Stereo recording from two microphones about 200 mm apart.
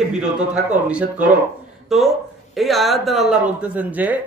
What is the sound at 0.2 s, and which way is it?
Speech, 5° right (ahead or behind).